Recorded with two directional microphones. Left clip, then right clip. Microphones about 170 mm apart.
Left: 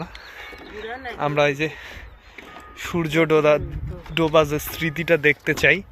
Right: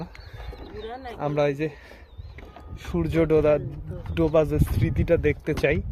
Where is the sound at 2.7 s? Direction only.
5° left (ahead or behind).